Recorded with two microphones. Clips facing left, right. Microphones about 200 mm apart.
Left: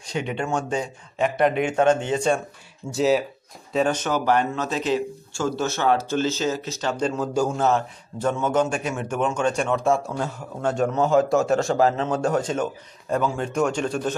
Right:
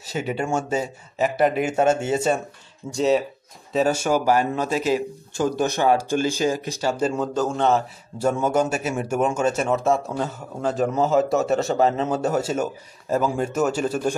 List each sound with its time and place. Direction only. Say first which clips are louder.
0.0 s a man's voice: right 1 dB; 5° right (ahead or behind)
7.2 s a man's voice: even; 5° left (ahead or behind)
8.2 s a man's voice: right 1 dB; 10° right (ahead or behind)